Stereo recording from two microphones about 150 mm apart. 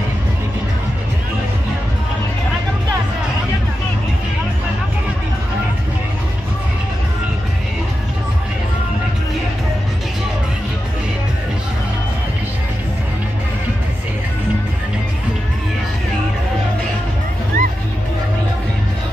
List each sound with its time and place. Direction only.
17.5 s music: 75° right (ahead or behind)